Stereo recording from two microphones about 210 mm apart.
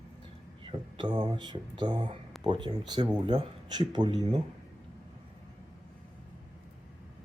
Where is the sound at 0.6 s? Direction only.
25° right (ahead or behind).